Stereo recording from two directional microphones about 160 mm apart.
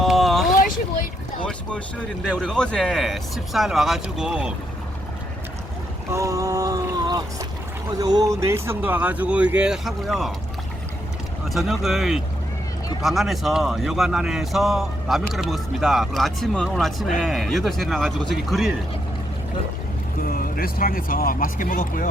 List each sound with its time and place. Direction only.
0.0 s vehicle: centre (ahead or behind)
2.4 s speech: 5° left (ahead or behind)
6.1 s a sound: 20° right (ahead or behind)
7.9 s speech: 25° right (ahead or behind); by 10.3 s centre (ahead or behind)
11.4 s speech: centre (ahead or behind)
20.2 s speech: 65° left (ahead or behind)